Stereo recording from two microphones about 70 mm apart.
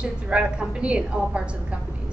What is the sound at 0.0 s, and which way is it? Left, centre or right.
A man's voice, centre.